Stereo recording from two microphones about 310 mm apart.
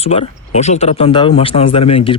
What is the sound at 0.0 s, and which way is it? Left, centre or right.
Speech, centre.